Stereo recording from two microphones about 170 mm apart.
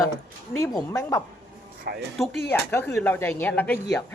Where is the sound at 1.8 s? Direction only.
65° right (ahead or behind).